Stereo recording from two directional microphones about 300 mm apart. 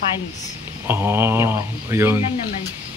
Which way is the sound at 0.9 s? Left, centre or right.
Centre.